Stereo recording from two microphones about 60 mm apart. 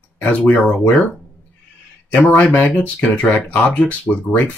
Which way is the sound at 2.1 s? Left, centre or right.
Left.